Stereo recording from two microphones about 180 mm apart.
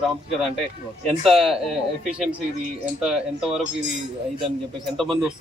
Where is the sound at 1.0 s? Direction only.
Centre (ahead or behind).